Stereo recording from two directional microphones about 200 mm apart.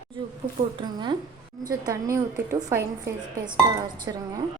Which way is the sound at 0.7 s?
25° right (ahead or behind).